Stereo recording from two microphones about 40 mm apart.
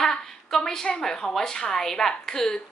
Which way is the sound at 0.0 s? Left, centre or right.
Centre.